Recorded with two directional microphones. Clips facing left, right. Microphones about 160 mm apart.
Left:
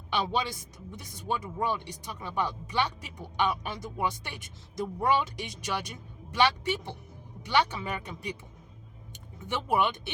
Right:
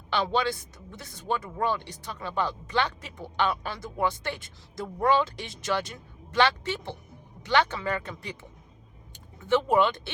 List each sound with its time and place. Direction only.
0.1 s speech: 15° left (ahead or behind)
9.4 s speech: 15° left (ahead or behind)